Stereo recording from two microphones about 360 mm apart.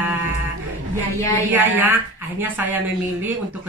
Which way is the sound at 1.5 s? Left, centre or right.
Centre.